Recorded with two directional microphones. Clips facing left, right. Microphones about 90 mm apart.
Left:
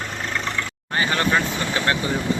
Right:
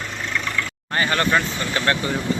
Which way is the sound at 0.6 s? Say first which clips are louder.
Right 1 dB; 15° left (ahead or behind).